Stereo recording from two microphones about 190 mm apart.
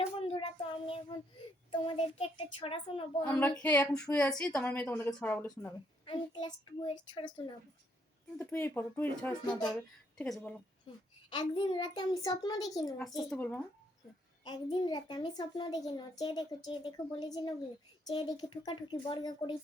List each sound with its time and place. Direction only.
0.2 s child singing: 30° left (ahead or behind)
1.7 s a child's voice: 25° left (ahead or behind)
3.2 s a woman's voice: 5° left (ahead or behind)
6.1 s a child's voice: 25° left (ahead or behind)
8.4 s a woman's voice: 10° left (ahead or behind)
11.3 s a child's voice: 25° left (ahead or behind)
13.3 s a woman's voice: 5° left (ahead or behind)
14.4 s a child's voice: 20° left (ahead or behind)